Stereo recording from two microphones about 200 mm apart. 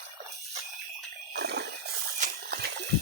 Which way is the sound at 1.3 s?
55° right (ahead or behind).